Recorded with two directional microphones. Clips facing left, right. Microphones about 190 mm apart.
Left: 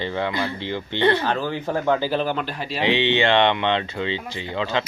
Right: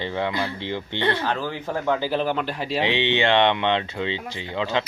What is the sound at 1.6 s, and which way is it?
Speech, 15° left (ahead or behind).